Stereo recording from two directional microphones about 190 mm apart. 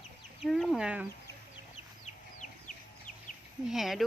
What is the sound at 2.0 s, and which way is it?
Chicken, 40° left (ahead or behind).